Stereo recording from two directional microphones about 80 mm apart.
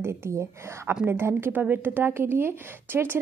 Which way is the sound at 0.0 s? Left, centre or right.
Right.